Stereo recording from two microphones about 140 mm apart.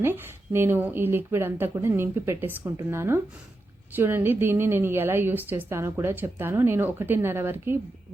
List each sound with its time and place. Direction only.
0.0 s a woman's voice: 15° right (ahead or behind)